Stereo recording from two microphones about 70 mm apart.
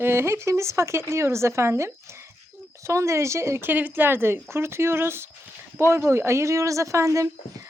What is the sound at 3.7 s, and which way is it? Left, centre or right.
Speech, right.